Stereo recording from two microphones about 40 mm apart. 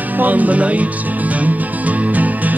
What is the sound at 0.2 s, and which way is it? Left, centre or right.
Music, right.